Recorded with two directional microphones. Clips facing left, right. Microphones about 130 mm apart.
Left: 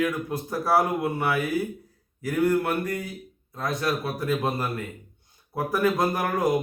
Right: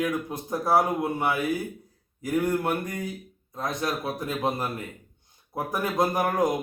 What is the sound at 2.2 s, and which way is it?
Speech, 20° right (ahead or behind).